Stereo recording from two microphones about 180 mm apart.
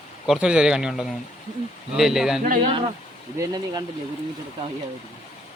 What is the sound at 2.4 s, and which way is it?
Speech, 50° right (ahead or behind).